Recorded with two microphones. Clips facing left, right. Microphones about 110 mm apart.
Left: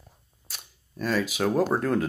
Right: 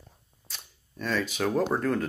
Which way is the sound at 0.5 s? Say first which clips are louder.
Left 1 dB; 10° left (ahead or behind).